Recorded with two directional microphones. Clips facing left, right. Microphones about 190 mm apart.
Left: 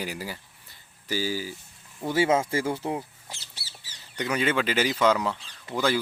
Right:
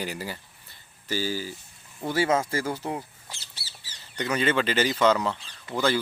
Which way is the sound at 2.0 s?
20° left (ahead or behind).